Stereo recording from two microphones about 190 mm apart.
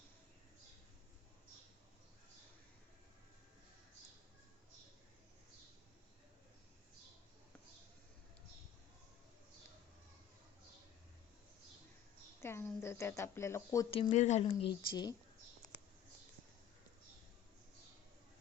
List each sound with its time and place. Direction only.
12.4 s speech: 10° left (ahead or behind)
13.9 s speech: 35° left (ahead or behind)